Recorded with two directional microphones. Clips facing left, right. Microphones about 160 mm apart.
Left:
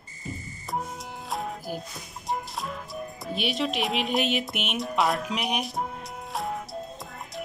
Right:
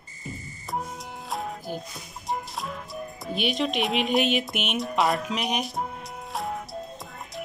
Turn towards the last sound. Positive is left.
turn(degrees=0)  # may be behind; listen again after turning